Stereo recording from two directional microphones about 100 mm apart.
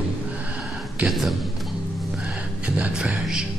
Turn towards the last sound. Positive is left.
turn(degrees=-10)  # may be behind; listen again after turning